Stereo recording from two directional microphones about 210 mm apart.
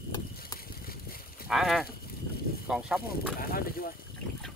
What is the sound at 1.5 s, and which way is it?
Livestock, centre (ahead or behind).